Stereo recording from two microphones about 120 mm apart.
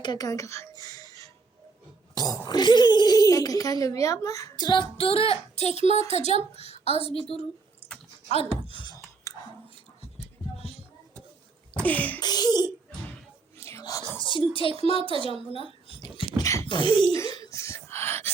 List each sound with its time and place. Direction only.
0.0 s a woman's voice: 35° left (ahead or behind); by 7.3 s 55° left (ahead or behind)
8.6 s a sound: 40° left (ahead or behind)
9.3 s chewing: 25° left (ahead or behind)
11.8 s beatboxing: 15° left (ahead or behind)
12.2 s speech: 35° left (ahead or behind)
13.6 s whispering: 20° left (ahead or behind)
14.3 s speech: 45° left (ahead or behind)
14.9 s a woman's voice: 50° right (ahead or behind)
16.0 s a sound: 35° left (ahead or behind)
16.6 s speech: 40° left (ahead or behind)
17.2 s a sound: 30° left (ahead or behind)